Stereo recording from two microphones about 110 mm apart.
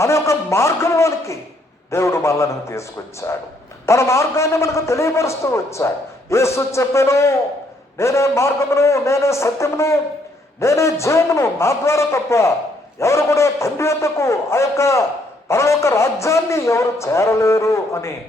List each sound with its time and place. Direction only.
0.0 s a man's voice: 25° left (ahead or behind)